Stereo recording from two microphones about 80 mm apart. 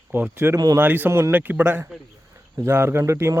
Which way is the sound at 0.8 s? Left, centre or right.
Right.